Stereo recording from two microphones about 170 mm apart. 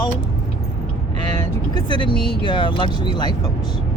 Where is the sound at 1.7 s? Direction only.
30° left (ahead or behind).